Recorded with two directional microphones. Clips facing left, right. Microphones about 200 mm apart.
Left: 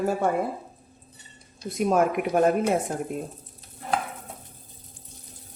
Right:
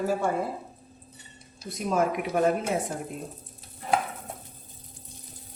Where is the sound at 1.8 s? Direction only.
55° left (ahead or behind).